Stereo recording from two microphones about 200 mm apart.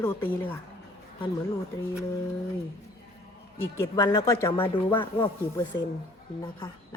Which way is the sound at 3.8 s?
15° left (ahead or behind).